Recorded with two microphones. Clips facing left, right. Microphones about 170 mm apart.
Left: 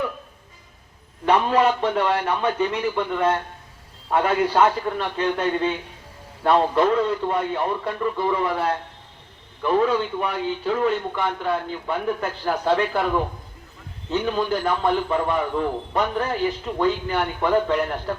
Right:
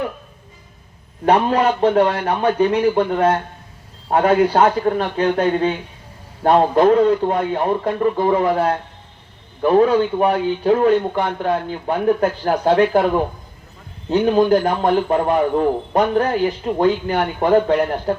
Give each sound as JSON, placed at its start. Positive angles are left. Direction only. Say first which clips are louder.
{"t": 1.2, "sound": "a man's voice", "louder": "right 3 dB", "side_deg": -45}
{"t": 14.1, "sound": "a man's voice", "louder": "right 9 dB", "side_deg": -45}